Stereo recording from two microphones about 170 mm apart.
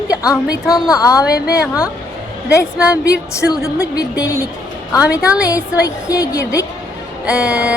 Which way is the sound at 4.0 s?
20° left (ahead or behind).